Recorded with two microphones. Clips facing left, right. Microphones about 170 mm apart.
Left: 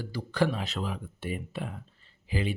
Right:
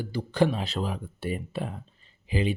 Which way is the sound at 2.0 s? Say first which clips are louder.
Right 4 dB; 20° right (ahead or behind).